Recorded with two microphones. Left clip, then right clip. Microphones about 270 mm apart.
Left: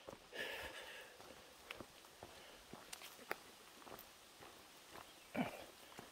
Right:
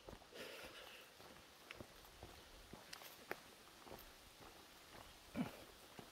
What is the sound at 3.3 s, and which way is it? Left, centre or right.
Walk, centre.